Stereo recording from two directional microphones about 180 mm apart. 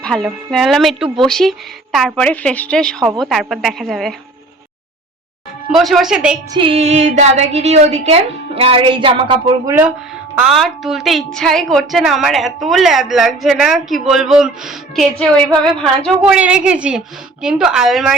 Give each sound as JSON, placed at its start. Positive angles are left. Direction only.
{"t": 0.0, "sound": "a woman's voice", "side_deg": 5}
{"t": 5.7, "sound": "a woman's voice", "side_deg": 0}
{"t": 6.5, "sound": "a woman's voice", "side_deg": -30}
{"t": 9.6, "sound": "speech", "side_deg": -15}
{"t": 10.4, "sound": "a woman's voice", "side_deg": 0}